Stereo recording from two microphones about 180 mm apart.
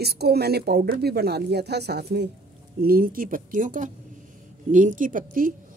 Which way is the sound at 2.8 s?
55° right (ahead or behind).